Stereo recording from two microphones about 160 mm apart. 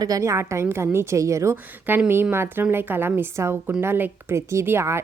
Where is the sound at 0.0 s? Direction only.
20° right (ahead or behind).